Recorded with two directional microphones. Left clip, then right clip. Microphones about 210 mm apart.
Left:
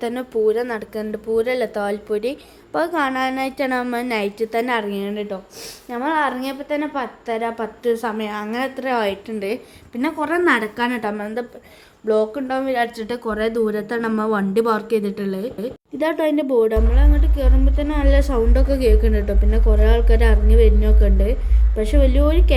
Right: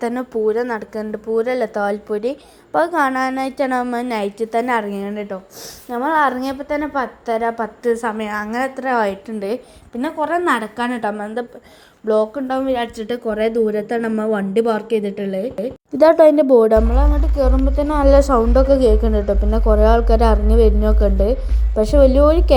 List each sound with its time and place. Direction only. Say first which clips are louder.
0.0 s speech: even; 10° right (ahead or behind)
16.0 s a woman's voice: right 10 dB; 20° right (ahead or behind)